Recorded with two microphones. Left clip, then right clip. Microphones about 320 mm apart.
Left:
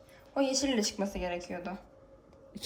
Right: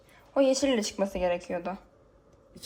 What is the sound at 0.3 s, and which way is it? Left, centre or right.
A woman's voice, centre.